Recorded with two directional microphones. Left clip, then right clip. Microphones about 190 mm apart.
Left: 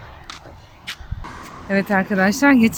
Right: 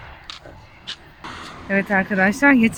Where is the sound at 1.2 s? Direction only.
40° right (ahead or behind).